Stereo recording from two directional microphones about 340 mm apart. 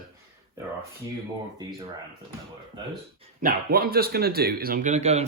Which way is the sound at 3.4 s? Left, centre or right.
Right.